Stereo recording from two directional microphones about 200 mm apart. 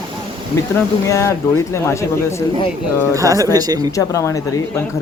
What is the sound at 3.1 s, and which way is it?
Speech, 15° right (ahead or behind).